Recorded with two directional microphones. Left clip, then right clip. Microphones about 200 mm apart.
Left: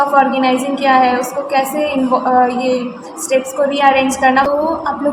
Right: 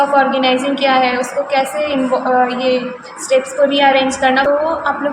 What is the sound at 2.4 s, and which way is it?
A woman's voice, 20° left (ahead or behind).